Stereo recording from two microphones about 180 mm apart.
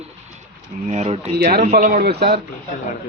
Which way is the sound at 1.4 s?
55° right (ahead or behind).